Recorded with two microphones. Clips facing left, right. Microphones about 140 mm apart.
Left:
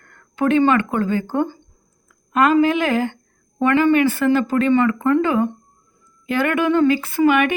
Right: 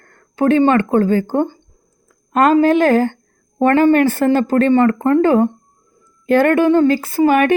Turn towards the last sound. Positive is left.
turn(degrees=-35)  # may be behind; listen again after turning